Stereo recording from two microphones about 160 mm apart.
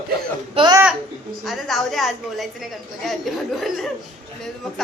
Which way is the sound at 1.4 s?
Centre (ahead or behind).